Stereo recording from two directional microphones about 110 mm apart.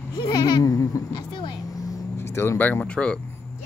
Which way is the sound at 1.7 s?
30° left (ahead or behind).